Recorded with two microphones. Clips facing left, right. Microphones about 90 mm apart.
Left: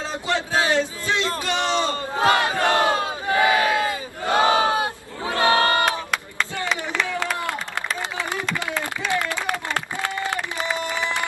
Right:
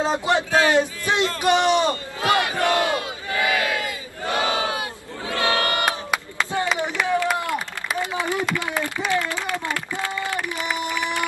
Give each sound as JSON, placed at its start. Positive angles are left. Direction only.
{"t": 0.0, "sound": "a sound", "side_deg": -20}
{"t": 0.5, "sound": "battle cry", "side_deg": 20}
{"t": 0.7, "sound": "a sound", "side_deg": -20}
{"t": 1.4, "sound": "a man's voice", "side_deg": -20}
{"t": 2.1, "sound": "battle cry", "side_deg": 25}
{"t": 5.3, "sound": "crowd", "side_deg": 30}
{"t": 6.8, "sound": "clapping", "side_deg": -15}